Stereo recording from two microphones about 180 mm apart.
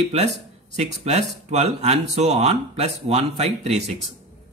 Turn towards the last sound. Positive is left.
turn(degrees=-35)  # may be behind; listen again after turning